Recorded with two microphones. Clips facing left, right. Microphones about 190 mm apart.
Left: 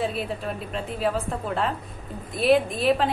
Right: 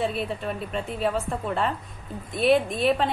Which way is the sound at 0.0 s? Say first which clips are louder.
Even; centre (ahead or behind).